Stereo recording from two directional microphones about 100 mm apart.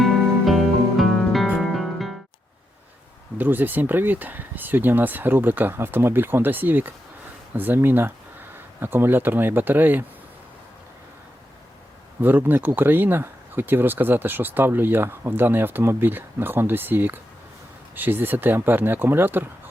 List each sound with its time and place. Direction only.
0.0 s music: centre (ahead or behind)
3.3 s speech: 20° right (ahead or behind)
12.2 s speech: 20° right (ahead or behind)